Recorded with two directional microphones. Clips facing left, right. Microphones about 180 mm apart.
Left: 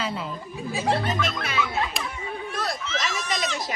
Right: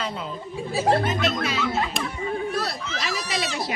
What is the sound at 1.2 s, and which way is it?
Speech, 55° left (ahead or behind).